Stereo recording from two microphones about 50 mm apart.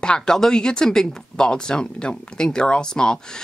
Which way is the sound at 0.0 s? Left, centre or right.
Centre.